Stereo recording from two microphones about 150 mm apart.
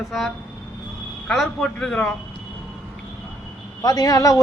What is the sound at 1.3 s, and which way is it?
Speech, centre (ahead or behind).